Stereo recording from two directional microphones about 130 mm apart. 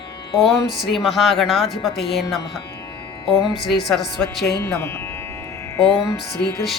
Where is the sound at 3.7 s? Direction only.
Centre (ahead or behind).